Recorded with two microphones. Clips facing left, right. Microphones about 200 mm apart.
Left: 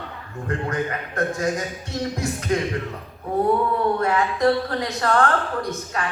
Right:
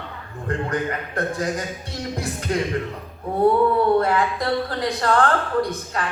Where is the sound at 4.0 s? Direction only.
35° right (ahead or behind).